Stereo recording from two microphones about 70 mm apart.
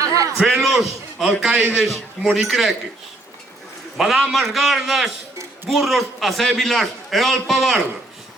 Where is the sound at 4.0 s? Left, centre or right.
Centre.